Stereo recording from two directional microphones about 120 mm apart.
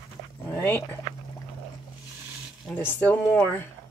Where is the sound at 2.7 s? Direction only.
15° left (ahead or behind).